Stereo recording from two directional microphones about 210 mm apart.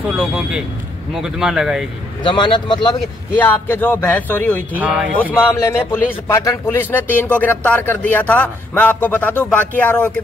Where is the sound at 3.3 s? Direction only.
10° left (ahead or behind).